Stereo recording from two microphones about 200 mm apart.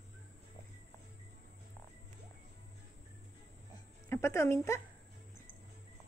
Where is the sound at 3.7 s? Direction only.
15° left (ahead or behind).